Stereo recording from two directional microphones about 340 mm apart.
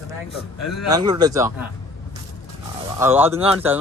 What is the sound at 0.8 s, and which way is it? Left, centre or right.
Speech, centre.